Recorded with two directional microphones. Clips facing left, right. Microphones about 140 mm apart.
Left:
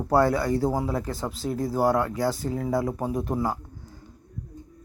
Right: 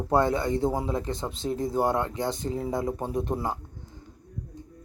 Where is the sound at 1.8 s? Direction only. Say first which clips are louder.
Left 4 dB; 20° right (ahead or behind).